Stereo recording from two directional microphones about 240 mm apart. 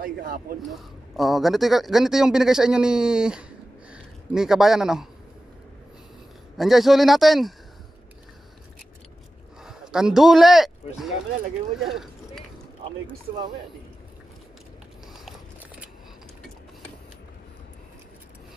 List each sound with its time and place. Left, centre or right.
0.0 s a man's voice: right
0.6 s speech: centre
6.5 s speech: centre
9.6 s speech: centre
15.1 s biting: centre